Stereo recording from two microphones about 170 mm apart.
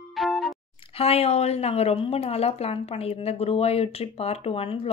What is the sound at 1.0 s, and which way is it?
A woman's voice, 35° left (ahead or behind).